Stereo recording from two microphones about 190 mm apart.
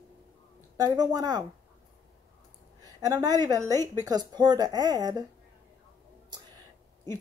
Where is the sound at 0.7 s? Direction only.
20° right (ahead or behind).